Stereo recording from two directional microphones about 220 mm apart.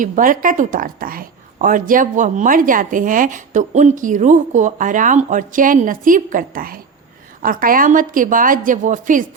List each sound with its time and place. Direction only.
0.0 s a woman's voice: 40° right (ahead or behind)